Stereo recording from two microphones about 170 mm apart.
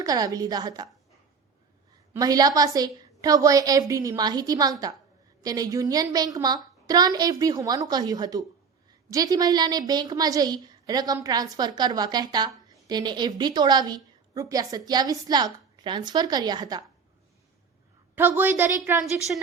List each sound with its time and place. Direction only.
0.0 s a woman's voice: 20° right (ahead or behind)
2.1 s a woman's voice: 20° right (ahead or behind)
18.1 s a woman's voice: 10° right (ahead or behind)